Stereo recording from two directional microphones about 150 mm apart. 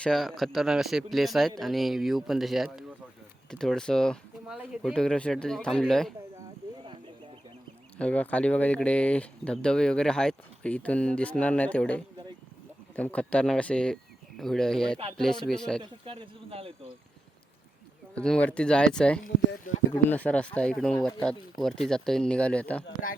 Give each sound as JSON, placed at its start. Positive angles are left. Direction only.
{"t": 0.0, "sound": "speech", "side_deg": 0}
{"t": 7.9, "sound": "speech", "side_deg": 10}
{"t": 15.8, "sound": "speech", "side_deg": -35}
{"t": 18.1, "sound": "speech", "side_deg": 5}